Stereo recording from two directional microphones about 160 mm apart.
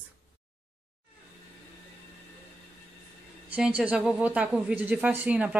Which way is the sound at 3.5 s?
5° right (ahead or behind).